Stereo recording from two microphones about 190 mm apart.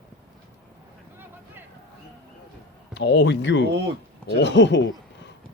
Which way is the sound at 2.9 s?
65° left (ahead or behind).